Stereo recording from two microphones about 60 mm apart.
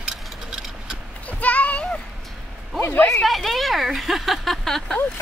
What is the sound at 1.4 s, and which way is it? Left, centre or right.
Speech, left.